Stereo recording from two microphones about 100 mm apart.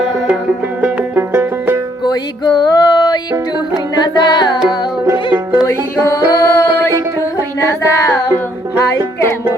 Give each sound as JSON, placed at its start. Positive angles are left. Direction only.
{"t": 0.8, "sound": "music", "side_deg": -20}
{"t": 2.0, "sound": "music", "side_deg": 45}
{"t": 5.6, "sound": "music", "side_deg": 35}
{"t": 7.7, "sound": "child singing", "side_deg": 30}